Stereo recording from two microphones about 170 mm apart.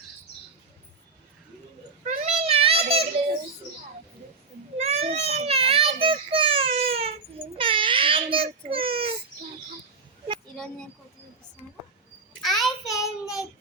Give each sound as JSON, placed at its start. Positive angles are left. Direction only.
{"t": 2.0, "sound": "a sound", "side_deg": -35}
{"t": 4.8, "sound": "baby cry", "side_deg": -40}
{"t": 7.6, "sound": "child singing", "side_deg": -30}
{"t": 12.4, "sound": "child singing", "side_deg": 0}